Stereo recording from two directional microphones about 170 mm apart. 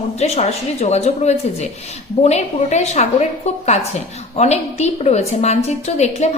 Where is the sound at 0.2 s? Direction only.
40° left (ahead or behind).